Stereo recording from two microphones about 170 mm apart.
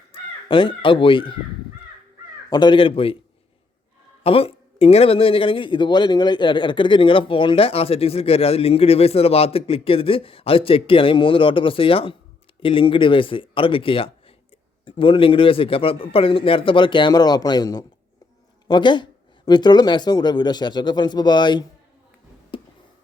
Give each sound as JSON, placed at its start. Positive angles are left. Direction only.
{"t": 0.1, "sound": "speech", "side_deg": 30}
{"t": 2.5, "sound": "a man's voice", "side_deg": 25}
{"t": 4.2, "sound": "a man's voice", "side_deg": 35}
{"t": 22.5, "sound": "a sound", "side_deg": 30}